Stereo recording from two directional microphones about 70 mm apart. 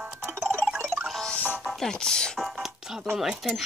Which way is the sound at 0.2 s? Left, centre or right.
Right.